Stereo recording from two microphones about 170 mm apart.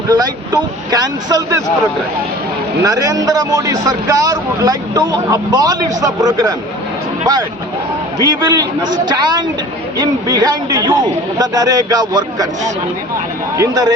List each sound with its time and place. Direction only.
0.1 s a man's voice: 25° right (ahead or behind)
2.8 s a man's voice: 20° right (ahead or behind)
8.2 s a man's voice: 25° right (ahead or behind)
13.6 s a man's voice: 20° right (ahead or behind)